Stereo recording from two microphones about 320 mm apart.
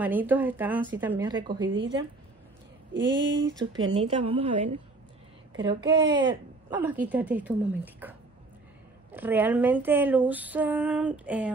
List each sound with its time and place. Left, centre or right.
0.0 s a woman's voice: centre
1.7 s speech: right
3.9 s speech: centre
5.6 s a woman's voice: centre